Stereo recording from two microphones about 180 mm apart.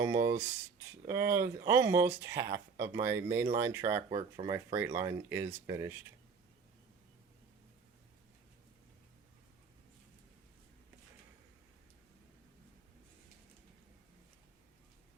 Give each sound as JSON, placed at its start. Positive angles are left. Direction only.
{"t": 0.0, "sound": "speech", "side_deg": -15}
{"t": 4.1, "sound": "speech", "side_deg": -30}
{"t": 4.5, "sound": "speech", "side_deg": -10}